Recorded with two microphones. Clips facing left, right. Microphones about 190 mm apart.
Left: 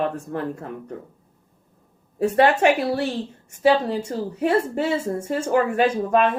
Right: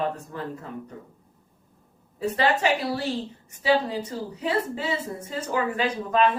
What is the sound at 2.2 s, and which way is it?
A woman's voice, 50° left (ahead or behind).